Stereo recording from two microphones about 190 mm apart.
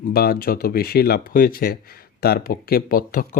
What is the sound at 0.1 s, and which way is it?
Speech, 50° left (ahead or behind).